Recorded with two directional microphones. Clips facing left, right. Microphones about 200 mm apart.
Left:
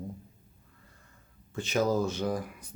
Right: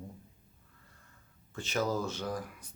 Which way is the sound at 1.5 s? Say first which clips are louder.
Left 5 dB; 15° left (ahead or behind).